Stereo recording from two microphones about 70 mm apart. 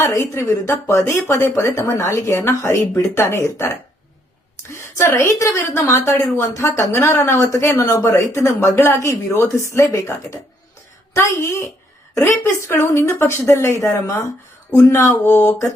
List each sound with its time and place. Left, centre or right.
0.0 s speech: left
4.7 s speech: left